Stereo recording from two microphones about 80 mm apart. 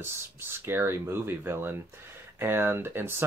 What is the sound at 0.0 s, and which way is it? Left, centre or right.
Speech, right.